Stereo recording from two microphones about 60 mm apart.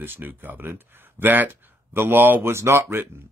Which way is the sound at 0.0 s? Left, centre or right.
Right.